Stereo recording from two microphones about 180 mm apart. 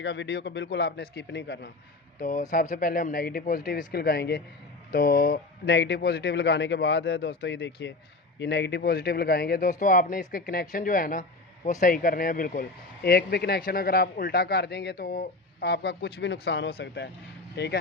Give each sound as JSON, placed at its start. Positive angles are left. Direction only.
{"t": 0.0, "sound": "speech", "side_deg": 75}
{"t": 2.1, "sound": "speech", "side_deg": 45}